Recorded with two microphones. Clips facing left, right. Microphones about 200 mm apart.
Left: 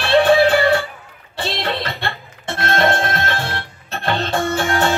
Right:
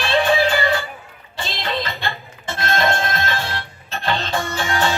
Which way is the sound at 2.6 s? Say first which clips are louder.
Left 3 dB; 60° left (ahead or behind).